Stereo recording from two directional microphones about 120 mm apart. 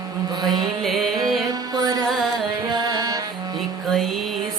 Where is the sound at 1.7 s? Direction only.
35° right (ahead or behind).